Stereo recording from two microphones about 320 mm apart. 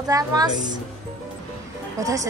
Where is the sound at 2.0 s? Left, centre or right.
Centre.